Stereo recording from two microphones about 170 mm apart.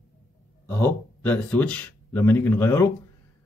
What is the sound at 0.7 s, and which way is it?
A man's voice, 10° left (ahead or behind).